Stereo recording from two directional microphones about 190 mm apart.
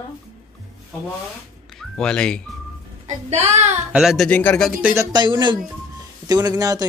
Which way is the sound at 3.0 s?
35° right (ahead or behind).